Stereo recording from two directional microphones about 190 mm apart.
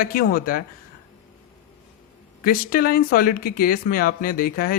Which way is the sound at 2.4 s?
50° left (ahead or behind).